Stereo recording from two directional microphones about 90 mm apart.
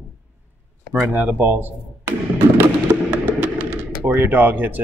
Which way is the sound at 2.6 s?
15° right (ahead or behind).